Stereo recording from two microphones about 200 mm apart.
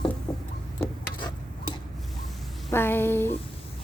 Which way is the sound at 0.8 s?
25° left (ahead or behind).